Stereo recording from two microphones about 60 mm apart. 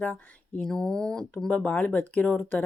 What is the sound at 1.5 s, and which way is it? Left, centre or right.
Speech, left.